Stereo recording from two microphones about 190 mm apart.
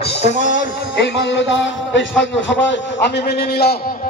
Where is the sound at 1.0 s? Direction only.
70° left (ahead or behind).